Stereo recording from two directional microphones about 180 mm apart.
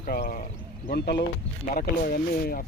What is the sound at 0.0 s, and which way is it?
Speech, 55° left (ahead or behind).